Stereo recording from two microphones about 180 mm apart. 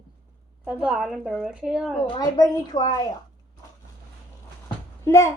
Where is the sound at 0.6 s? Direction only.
5° right (ahead or behind).